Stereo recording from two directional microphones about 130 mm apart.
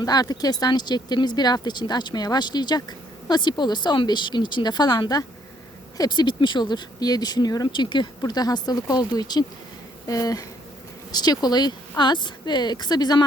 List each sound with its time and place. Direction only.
0.0 s speech: 30° left (ahead or behind)